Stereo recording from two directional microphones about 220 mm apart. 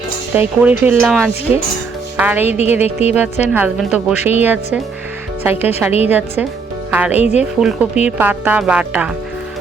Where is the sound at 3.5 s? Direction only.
5° right (ahead or behind).